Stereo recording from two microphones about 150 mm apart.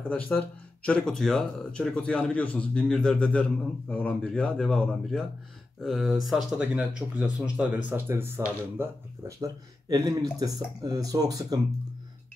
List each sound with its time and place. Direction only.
0.1 s a man's voice: 10° left (ahead or behind); by 11.6 s 25° right (ahead or behind)